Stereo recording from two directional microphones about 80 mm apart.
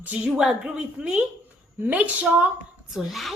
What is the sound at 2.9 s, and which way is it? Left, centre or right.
Speech, centre.